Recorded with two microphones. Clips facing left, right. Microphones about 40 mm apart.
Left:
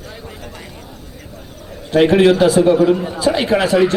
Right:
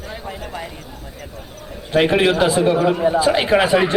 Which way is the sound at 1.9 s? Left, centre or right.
Centre.